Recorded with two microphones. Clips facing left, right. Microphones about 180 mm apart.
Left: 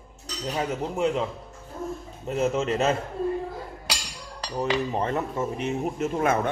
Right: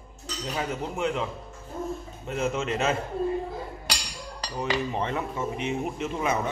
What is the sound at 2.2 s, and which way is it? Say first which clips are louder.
Speech: left 4 dB; 35° left (ahead or behind).